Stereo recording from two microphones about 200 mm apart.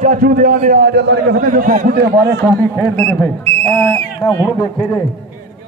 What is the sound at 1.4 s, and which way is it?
A man's voice, 45° right (ahead or behind).